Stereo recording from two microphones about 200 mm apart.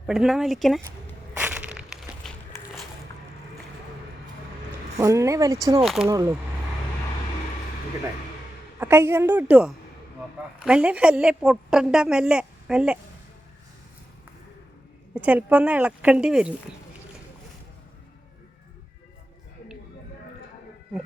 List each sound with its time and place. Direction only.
0.1 s a woman's voice: centre (ahead or behind)
1.3 s crushing: 10° right (ahead or behind)
4.9 s speech: 15° right (ahead or behind)
8.8 s a woman's voice: 10° right (ahead or behind)
15.1 s speech: 5° right (ahead or behind)